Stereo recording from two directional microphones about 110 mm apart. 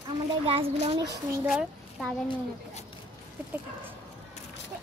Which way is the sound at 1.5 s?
5° right (ahead or behind).